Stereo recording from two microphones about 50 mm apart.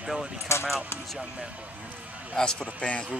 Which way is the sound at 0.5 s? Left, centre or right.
Left.